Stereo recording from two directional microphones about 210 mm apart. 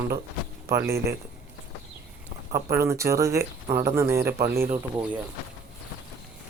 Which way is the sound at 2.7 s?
15° right (ahead or behind).